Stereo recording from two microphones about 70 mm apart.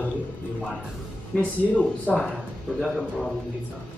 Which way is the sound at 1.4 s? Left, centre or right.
Centre.